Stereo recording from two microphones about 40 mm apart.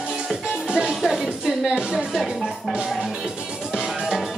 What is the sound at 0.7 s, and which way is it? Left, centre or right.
Music, right.